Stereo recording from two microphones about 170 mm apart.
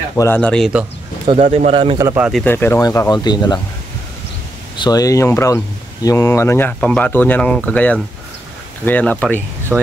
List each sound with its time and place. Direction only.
0.1 s speech: 10° left (ahead or behind)
1.2 s speech: 35° right (ahead or behind)
2.0 s speech: 15° right (ahead or behind)
2.4 s speech: 15° left (ahead or behind)
4.7 s speech: 25° left (ahead or behind)
9.7 s speech: 5° right (ahead or behind)